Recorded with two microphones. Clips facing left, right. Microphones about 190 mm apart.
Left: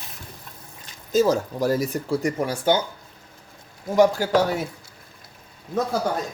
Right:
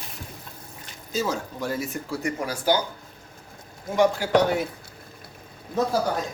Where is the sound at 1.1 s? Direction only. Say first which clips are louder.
Left 8 dB; 40° left (ahead or behind); by 2.8 s 25° left (ahead or behind).